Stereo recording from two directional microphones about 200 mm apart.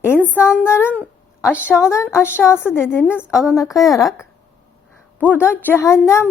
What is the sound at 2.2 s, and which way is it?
Speech, 10° left (ahead or behind).